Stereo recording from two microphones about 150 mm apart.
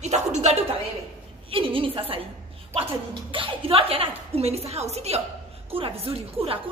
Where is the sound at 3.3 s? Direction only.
40° right (ahead or behind).